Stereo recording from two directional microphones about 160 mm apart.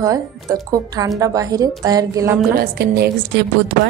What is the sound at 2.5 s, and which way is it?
Speech, 80° right.